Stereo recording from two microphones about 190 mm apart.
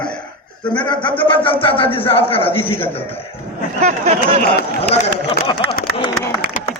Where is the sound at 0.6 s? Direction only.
25° left (ahead or behind).